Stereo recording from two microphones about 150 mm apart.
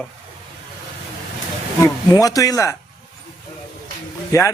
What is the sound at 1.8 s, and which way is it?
Speech, 25° left (ahead or behind).